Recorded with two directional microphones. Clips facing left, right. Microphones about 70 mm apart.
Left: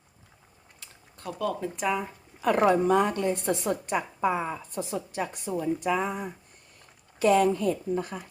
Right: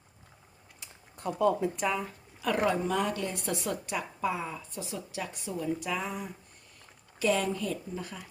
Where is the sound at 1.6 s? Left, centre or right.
Centre.